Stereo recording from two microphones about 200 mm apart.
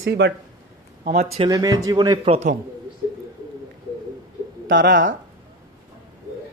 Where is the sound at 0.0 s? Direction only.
55° right (ahead or behind).